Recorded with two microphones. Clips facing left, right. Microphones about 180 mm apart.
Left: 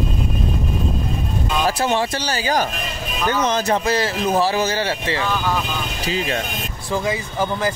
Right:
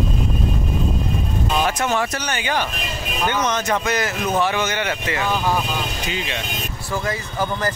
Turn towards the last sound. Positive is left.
turn(degrees=10)  # may be behind; listen again after turning